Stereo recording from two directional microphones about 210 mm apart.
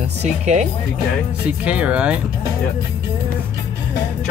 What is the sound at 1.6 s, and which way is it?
Speech, 5° right (ahead or behind).